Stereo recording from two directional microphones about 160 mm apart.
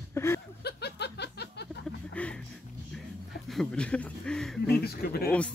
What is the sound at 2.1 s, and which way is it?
Music, 5° left (ahead or behind).